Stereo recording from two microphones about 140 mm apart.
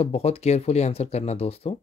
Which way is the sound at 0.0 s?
50° left (ahead or behind).